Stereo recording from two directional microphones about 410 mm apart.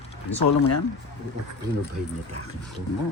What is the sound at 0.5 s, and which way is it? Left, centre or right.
Speech, left.